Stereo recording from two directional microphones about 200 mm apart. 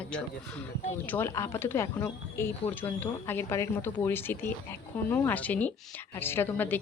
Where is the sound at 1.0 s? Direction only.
10° left (ahead or behind).